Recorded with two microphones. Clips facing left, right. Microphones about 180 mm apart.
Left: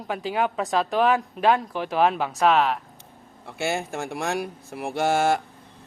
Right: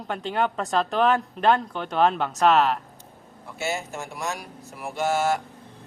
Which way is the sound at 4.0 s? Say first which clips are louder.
Left 3 dB; 90° left.